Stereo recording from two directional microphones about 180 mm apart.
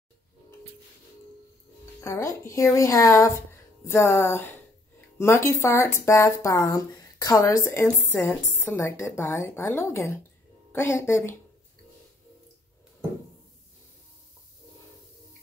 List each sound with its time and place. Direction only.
2.0 s speech: 15° left (ahead or behind)